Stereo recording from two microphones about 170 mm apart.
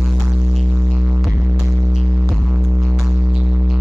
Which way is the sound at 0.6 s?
5° right (ahead or behind).